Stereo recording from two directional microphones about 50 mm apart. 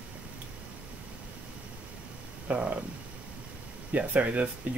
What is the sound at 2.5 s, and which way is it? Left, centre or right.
Speech, right.